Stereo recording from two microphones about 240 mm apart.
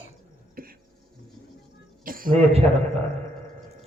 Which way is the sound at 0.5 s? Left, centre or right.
Right.